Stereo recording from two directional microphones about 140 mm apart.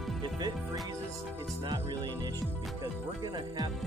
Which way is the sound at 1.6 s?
30° right (ahead or behind).